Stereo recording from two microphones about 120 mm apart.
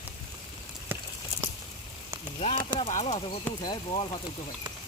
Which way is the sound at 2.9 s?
75° left (ahead or behind).